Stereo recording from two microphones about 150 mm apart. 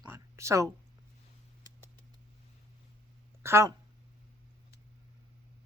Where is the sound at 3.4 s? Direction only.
15° right (ahead or behind).